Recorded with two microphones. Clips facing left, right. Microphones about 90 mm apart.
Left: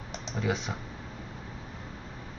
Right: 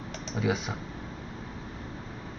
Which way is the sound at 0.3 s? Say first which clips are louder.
Right 2 dB; 5° right (ahead or behind).